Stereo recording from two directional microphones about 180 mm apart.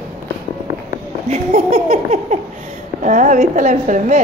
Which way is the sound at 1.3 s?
40° right (ahead or behind).